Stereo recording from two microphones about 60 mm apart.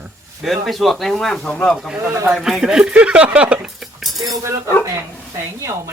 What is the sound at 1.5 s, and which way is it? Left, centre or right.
Speech, left.